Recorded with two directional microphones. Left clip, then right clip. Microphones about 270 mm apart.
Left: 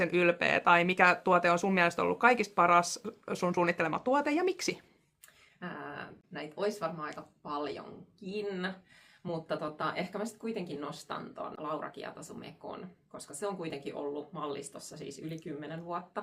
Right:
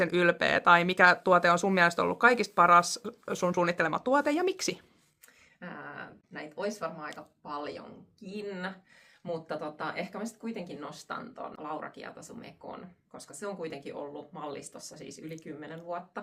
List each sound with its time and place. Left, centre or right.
0.0 s speech: centre
5.5 s speech: centre